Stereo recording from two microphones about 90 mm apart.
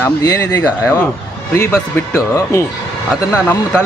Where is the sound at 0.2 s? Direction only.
30° left (ahead or behind).